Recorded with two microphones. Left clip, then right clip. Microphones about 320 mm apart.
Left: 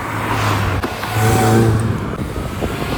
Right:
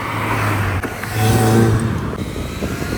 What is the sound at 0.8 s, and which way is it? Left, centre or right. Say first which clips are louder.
Vehicle: left 2 dB; left.